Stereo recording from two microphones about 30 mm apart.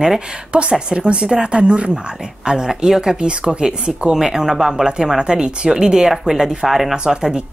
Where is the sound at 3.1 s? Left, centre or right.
Right.